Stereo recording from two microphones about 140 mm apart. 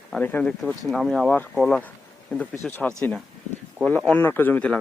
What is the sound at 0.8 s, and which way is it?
Speech, centre (ahead or behind).